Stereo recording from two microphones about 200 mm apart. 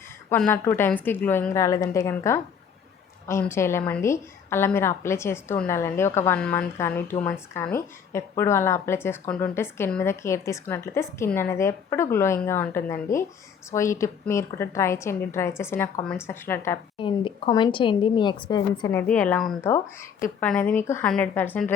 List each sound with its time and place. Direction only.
0.3 s a woman's voice: 10° left (ahead or behind)
17.0 s a woman's voice: 25° left (ahead or behind); by 19.7 s 5° left (ahead or behind)
19.7 s a woman's voice: 15° left (ahead or behind)